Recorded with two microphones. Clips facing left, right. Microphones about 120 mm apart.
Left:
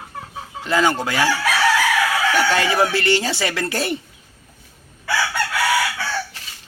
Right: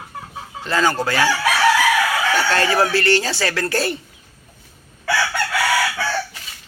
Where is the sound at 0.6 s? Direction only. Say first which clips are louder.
Even; 15° left (ahead or behind).